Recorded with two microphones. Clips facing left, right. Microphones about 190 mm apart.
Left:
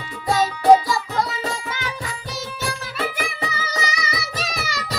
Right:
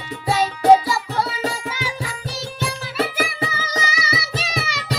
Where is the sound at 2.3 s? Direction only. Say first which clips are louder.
Even; centre (ahead or behind).